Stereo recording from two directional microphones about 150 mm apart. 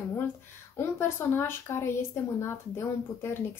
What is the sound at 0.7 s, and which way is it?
A woman's voice, 15° left (ahead or behind).